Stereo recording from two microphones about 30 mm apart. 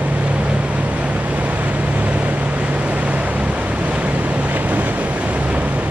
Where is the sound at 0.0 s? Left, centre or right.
Right.